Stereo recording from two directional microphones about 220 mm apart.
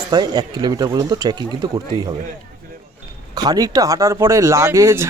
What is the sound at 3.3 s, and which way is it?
Speech, 15° right (ahead or behind).